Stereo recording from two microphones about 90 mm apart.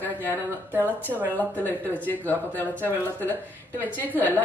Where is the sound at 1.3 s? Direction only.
20° left (ahead or behind).